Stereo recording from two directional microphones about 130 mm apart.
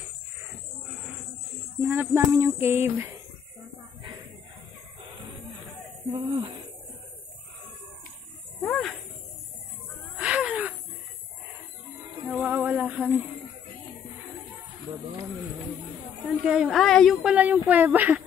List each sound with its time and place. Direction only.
1.8 s speech: 15° right (ahead or behind)
6.1 s speech: 35° right (ahead or behind)
8.6 s snake: 5° left (ahead or behind)
10.1 s a sound: 10° right (ahead or behind)
12.3 s a sound: 10° right (ahead or behind)
16.4 s speech: 5° right (ahead or behind)